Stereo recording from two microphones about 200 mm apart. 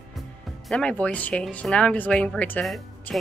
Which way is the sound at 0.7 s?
5° left (ahead or behind).